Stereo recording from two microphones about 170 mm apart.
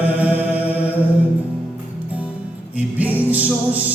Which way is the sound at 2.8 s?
10° right (ahead or behind).